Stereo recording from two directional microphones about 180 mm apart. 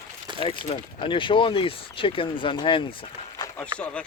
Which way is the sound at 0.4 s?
30° left (ahead or behind).